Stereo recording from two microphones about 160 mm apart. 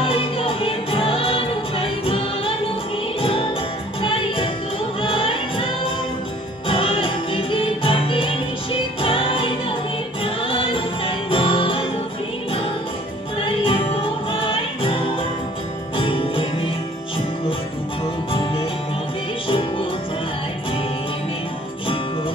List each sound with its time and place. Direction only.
0.0 s music: 35° left (ahead or behind)
6.7 s music: 35° left (ahead or behind)
13.5 s music: 35° left (ahead or behind)
18.3 s music: 35° left (ahead or behind)